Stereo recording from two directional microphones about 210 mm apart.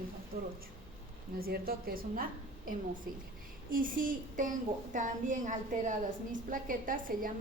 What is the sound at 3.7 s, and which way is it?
A woman's voice, 40° right (ahead or behind).